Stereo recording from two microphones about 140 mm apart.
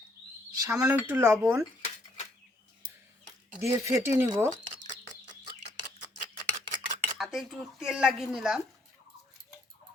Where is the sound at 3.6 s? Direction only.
20° right (ahead or behind).